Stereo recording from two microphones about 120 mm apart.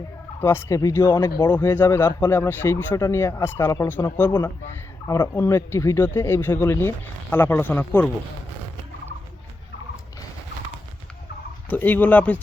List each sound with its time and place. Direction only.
0.3 s speech: 20° left (ahead or behind)
11.7 s speech: 15° left (ahead or behind)